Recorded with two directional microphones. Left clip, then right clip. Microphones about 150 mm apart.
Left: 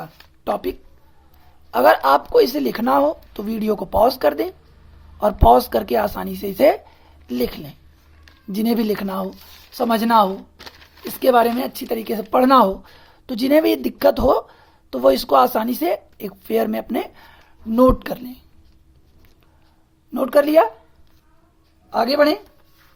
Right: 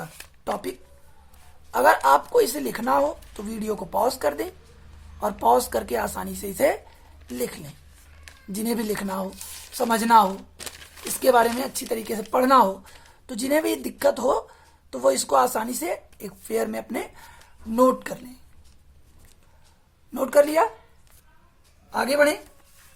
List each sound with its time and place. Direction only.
0.0 s a sound: 55° left (ahead or behind)
1.7 s speech: 40° left (ahead or behind)
20.1 s speech: 45° left (ahead or behind)
21.8 s a woman's voice: 60° left (ahead or behind)